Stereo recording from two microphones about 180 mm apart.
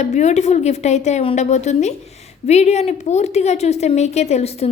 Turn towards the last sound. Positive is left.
turn(degrees=35)  # may be behind; listen again after turning